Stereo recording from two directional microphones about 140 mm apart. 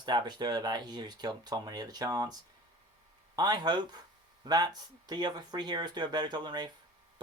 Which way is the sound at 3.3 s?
30° right (ahead or behind).